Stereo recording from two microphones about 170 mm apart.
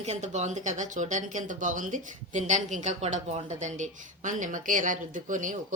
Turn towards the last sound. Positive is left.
turn(degrees=-50)  # may be behind; listen again after turning